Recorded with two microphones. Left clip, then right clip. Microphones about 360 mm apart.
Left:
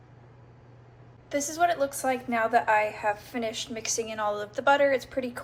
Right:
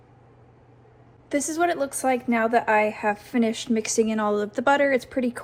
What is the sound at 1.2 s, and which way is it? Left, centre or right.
A woman's voice, centre.